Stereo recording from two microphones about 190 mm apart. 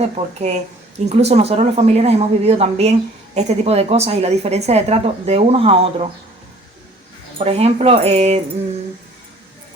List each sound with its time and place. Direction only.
0.0 s speech: 35° right (ahead or behind)
7.3 s speech: 30° right (ahead or behind)